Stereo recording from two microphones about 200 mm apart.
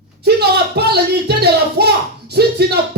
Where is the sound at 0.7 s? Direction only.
55° right (ahead or behind).